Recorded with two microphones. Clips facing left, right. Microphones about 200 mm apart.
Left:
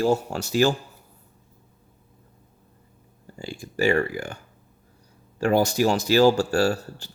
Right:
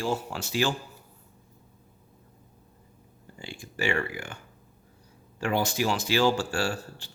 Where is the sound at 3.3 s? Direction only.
40° left (ahead or behind).